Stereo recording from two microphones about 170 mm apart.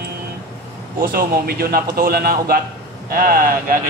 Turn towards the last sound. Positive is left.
turn(degrees=-55)  # may be behind; listen again after turning